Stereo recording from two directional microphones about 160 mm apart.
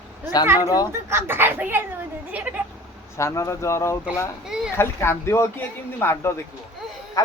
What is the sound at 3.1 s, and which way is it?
Speech, 20° left (ahead or behind).